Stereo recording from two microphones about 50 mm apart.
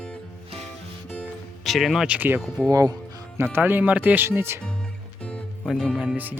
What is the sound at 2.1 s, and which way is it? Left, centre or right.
Speech, right.